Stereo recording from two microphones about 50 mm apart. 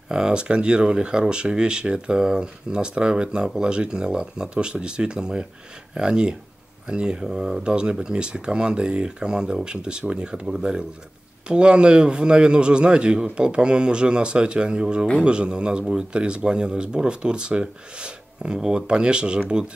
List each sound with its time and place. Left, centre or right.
0.1 s speech: centre